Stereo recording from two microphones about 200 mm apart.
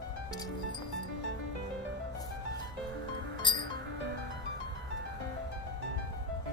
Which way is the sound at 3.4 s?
25° left (ahead or behind).